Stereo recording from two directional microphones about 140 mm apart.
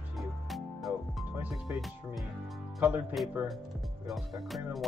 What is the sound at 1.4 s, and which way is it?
Speech, 5° right (ahead or behind).